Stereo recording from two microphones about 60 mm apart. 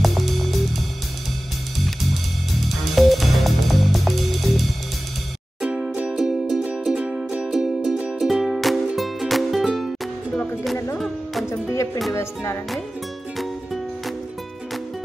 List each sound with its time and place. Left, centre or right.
0.0 s music: centre
2.9 s music: centre
5.6 s music: centre
6.1 s music: centre
11.7 s music: left